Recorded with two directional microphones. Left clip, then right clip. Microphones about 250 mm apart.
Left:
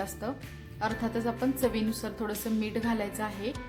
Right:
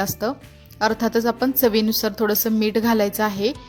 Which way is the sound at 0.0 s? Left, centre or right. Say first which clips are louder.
Right 11 dB; right.